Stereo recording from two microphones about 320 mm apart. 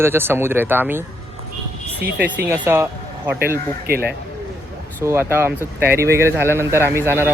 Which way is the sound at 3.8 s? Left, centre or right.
Right.